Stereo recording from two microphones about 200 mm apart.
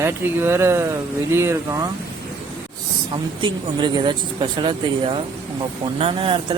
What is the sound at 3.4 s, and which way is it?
Speech, 25° right (ahead or behind).